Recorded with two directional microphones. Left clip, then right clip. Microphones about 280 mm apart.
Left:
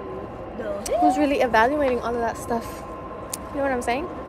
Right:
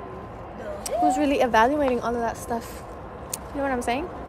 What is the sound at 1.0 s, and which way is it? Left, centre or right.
A woman's voice, centre.